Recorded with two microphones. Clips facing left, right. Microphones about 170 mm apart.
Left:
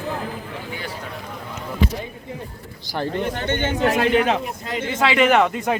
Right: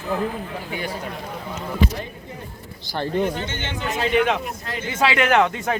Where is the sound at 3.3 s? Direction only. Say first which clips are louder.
Left 6 dB; 60° left (ahead or behind).